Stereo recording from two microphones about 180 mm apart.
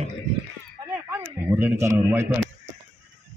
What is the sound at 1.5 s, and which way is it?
Speech, 10° right (ahead or behind).